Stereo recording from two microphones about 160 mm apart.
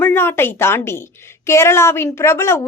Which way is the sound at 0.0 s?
15° left (ahead or behind).